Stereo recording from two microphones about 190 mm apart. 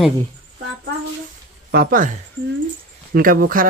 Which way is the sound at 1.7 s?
50° right (ahead or behind).